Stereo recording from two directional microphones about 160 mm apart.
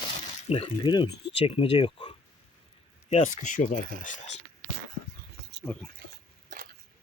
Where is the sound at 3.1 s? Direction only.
45° left (ahead or behind).